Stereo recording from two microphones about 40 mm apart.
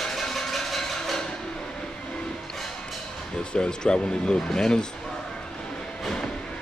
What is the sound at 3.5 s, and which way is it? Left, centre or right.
A man's voice, left.